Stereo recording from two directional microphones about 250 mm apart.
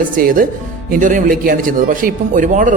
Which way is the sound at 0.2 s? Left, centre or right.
Right.